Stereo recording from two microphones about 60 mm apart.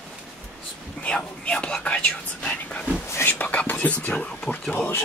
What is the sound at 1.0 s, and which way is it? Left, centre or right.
Whispering, centre.